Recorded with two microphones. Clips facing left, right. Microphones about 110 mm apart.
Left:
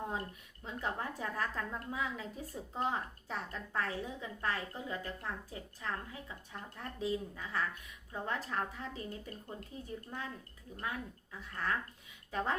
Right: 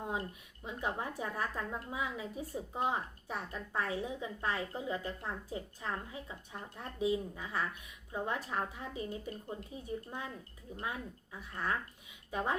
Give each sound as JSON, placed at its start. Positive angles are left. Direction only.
{"t": 0.6, "sound": "a woman's voice", "side_deg": -15}